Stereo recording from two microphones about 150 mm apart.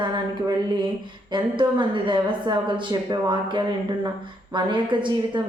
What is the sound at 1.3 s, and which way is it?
A woman's voice, 35° right (ahead or behind).